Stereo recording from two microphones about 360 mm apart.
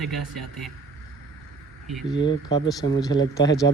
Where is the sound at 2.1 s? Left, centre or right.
Centre.